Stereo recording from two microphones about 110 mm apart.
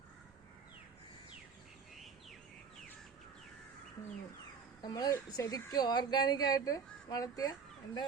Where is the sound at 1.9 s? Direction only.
Centre (ahead or behind).